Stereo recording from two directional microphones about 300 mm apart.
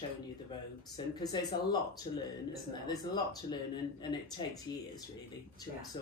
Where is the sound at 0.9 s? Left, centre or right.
Centre.